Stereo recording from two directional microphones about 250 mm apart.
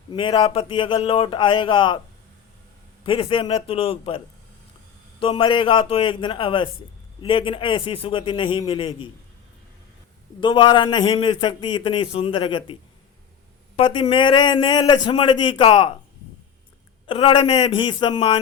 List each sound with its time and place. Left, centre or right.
0.1 s a man's voice: centre
3.1 s a man's voice: left
5.2 s a man's voice: centre
10.4 s a man's voice: centre
13.7 s a man's voice: centre
17.1 s a man's voice: left